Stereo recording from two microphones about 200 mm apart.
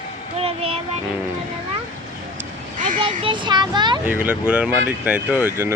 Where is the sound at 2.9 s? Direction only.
30° right (ahead or behind).